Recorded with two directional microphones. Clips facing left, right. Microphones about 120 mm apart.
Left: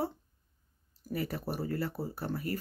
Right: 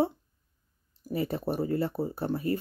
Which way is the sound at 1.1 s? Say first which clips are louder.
Right 5 dB; 25° right (ahead or behind).